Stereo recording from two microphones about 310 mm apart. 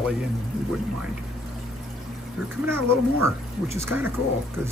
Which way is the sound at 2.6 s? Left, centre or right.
Centre.